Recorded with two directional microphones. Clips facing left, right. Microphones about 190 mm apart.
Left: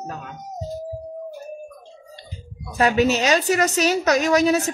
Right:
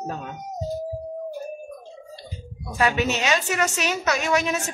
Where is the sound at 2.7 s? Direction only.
40° left (ahead or behind).